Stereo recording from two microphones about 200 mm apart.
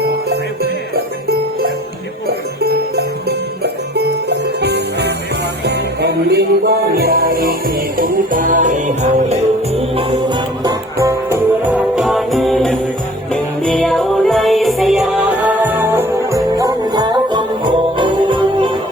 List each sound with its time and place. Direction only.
0.0 s jingle bell: 50° right (ahead or behind)
2.2 s music: 50° right (ahead or behind)
9.7 s music: 30° right (ahead or behind)